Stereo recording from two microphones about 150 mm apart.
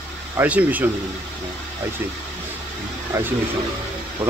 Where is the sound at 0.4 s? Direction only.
10° right (ahead or behind).